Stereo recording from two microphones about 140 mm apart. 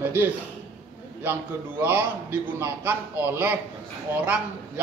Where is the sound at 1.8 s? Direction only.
15° right (ahead or behind).